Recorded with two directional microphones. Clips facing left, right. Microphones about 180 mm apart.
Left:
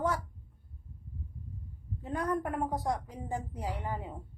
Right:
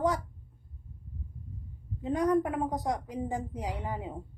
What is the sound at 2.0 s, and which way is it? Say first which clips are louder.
Speech: right 6 dB; 15° right (ahead or behind).